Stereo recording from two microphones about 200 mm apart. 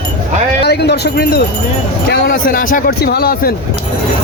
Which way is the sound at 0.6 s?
55° left (ahead or behind).